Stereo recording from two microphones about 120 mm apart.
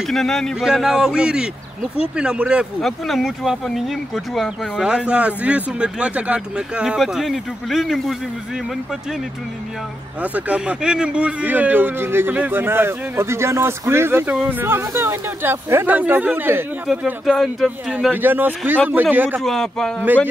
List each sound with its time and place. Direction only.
0.1 s a man's voice: centre (ahead or behind)
10.2 s a man's voice: 10° right (ahead or behind)
16.8 s speech: 5° right (ahead or behind)
18.1 s a man's voice: 15° right (ahead or behind)
19.4 s speech: 5° left (ahead or behind)